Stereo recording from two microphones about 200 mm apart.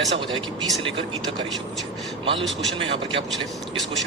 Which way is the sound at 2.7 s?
25° right (ahead or behind).